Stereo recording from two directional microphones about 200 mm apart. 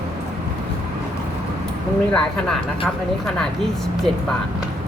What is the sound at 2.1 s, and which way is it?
Speech, 5° left (ahead or behind).